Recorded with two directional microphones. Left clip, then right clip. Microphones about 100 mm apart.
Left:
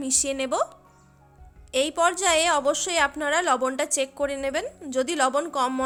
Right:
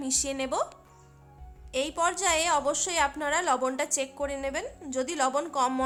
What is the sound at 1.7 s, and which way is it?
A woman's voice, 45° left (ahead or behind).